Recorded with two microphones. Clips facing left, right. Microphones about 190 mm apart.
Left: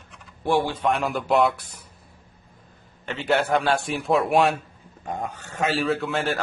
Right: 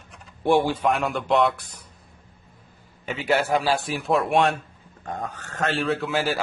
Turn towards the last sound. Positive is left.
turn(degrees=0)  # may be behind; listen again after turning